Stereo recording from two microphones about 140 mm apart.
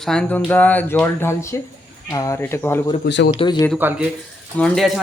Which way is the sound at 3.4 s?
30° left (ahead or behind).